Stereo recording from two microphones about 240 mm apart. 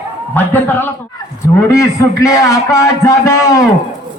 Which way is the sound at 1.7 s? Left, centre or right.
Centre.